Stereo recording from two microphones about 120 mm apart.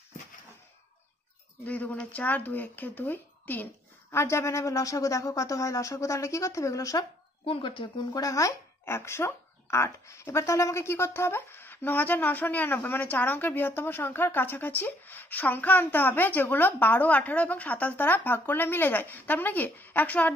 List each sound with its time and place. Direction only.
1.7 s speech: 15° left (ahead or behind); by 7.1 s 30° left (ahead or behind)
7.4 s speech: 45° left (ahead or behind)
8.2 s speech: 25° left (ahead or behind)